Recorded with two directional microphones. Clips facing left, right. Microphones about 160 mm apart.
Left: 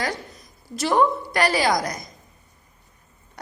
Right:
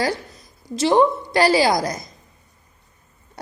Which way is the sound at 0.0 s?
30° right (ahead or behind).